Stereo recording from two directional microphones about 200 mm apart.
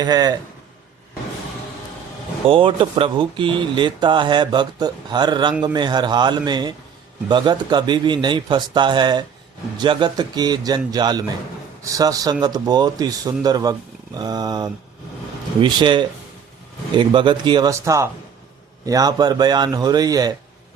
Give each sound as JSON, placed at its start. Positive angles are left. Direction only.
{"t": 0.0, "sound": "speech", "side_deg": -20}
{"t": 2.5, "sound": "speech", "side_deg": -25}